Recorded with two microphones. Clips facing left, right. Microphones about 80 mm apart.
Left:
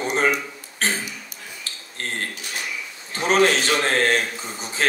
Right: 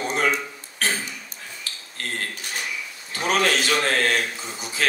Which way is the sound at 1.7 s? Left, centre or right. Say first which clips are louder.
Even; left.